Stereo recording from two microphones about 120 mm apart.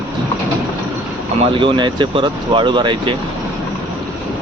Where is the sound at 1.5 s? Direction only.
45° right (ahead or behind).